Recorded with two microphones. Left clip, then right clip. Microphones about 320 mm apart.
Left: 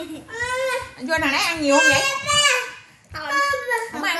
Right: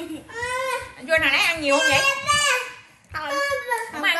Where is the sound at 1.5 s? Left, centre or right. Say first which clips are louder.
Left 3 dB; left.